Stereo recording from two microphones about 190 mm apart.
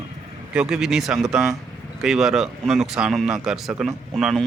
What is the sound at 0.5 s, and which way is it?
A man's voice, 5° right (ahead or behind).